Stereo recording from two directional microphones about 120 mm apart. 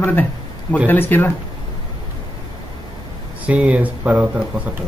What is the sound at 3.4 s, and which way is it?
Speech, 10° right (ahead or behind).